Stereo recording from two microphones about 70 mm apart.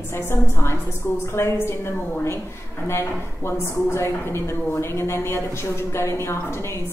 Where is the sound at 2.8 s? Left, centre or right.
Left.